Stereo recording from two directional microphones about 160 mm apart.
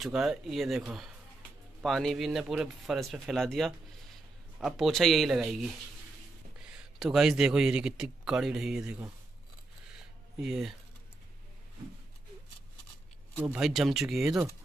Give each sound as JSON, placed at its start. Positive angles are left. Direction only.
{"t": 0.0, "sound": "a man's voice", "side_deg": -5}
{"t": 10.4, "sound": "speech", "side_deg": 0}
{"t": 13.4, "sound": "speech", "side_deg": -5}